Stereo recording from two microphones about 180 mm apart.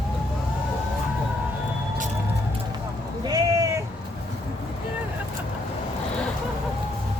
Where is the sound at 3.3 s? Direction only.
20° right (ahead or behind).